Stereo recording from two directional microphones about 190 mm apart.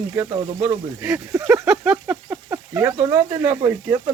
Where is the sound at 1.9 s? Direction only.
10° right (ahead or behind).